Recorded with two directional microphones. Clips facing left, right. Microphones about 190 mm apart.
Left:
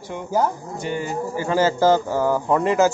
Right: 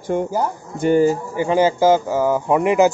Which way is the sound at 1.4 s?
15° right (ahead or behind).